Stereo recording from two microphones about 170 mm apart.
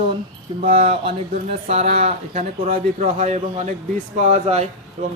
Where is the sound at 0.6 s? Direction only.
55° right (ahead or behind).